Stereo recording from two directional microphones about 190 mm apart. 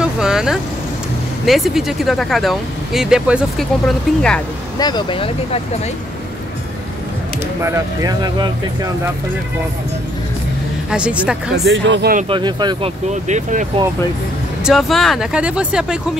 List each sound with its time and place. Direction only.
0.0 s vehicle: 5° right (ahead or behind)
1.4 s speech: centre (ahead or behind)
4.7 s speech: 20° left (ahead or behind)
7.6 s speech: 15° right (ahead or behind)
10.9 s speech: 5° right (ahead or behind)
11.5 s speech: 70° right (ahead or behind)
12.3 s speech: 25° right (ahead or behind)
13.1 s speech: 40° right (ahead or behind)
14.6 s speech: centre (ahead or behind)